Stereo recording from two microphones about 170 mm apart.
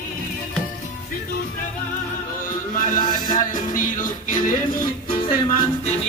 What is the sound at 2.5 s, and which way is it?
Music, 50° left (ahead or behind).